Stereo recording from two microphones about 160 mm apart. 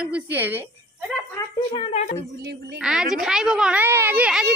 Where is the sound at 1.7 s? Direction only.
35° left (ahead or behind).